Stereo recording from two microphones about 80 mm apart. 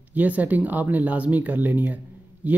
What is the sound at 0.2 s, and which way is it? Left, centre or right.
Speech, centre.